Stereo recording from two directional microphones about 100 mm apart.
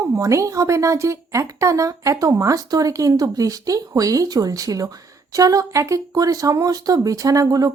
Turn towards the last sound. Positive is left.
turn(degrees=-35)  # may be behind; listen again after turning